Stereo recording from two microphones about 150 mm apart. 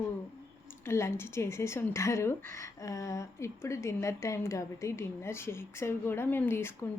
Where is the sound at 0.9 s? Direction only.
15° left (ahead or behind).